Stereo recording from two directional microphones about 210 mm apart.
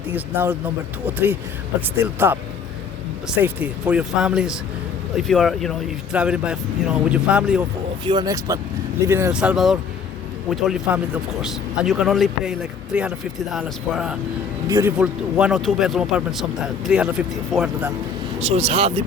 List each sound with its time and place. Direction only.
0.1 s speech: 10° right (ahead or behind)
8.0 s speech: 20° right (ahead or behind)
18.3 s speech: 30° right (ahead or behind)